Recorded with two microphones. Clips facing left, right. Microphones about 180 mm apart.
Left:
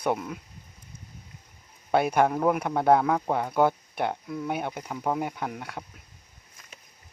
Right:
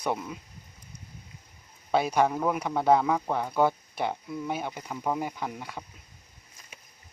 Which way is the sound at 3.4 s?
Centre (ahead or behind).